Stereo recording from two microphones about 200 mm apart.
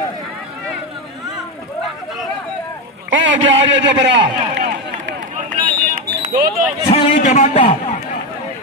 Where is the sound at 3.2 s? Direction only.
65° right (ahead or behind).